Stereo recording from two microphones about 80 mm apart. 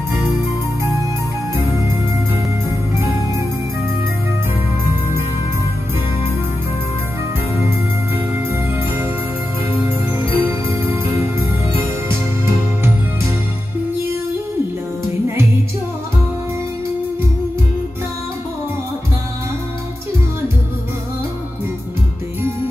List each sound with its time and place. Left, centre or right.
8.5 s music: right